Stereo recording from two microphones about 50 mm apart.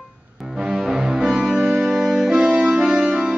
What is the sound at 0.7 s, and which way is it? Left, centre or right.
Music, centre.